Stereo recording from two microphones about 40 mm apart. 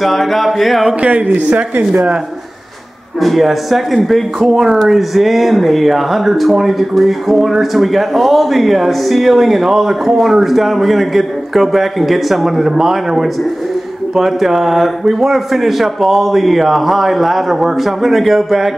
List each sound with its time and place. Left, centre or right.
0.0 s speech: centre
1.0 s speech: right
3.2 s speech: centre
4.5 s speech: centre
4.8 s speech: centre